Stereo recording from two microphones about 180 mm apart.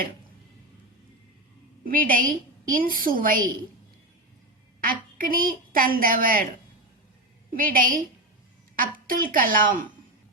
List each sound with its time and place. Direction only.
1.8 s a woman's voice: 50° right (ahead or behind)
4.8 s a woman's voice: 50° right (ahead or behind)
7.5 s a woman's voice: 50° right (ahead or behind)